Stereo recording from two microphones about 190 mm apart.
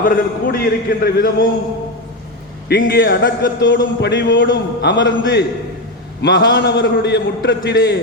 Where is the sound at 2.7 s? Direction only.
55° left (ahead or behind).